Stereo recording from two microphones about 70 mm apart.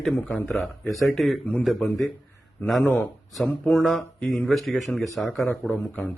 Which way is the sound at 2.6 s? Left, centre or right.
Left.